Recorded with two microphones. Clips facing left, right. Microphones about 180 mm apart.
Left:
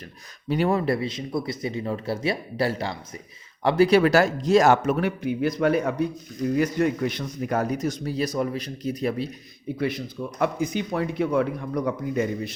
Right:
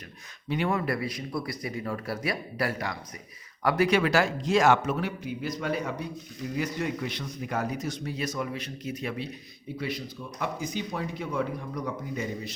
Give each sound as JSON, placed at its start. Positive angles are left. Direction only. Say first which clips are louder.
{"t": 0.4, "sound": "a man's voice", "louder": "left 5 dB", "side_deg": 40}
{"t": 4.9, "sound": "a man's voice", "louder": "left 7 dB", "side_deg": 60}
{"t": 9.7, "sound": "speech", "louder": "left 6 dB", "side_deg": 50}